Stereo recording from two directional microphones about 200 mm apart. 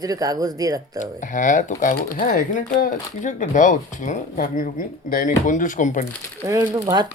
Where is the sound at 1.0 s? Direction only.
40° left (ahead or behind).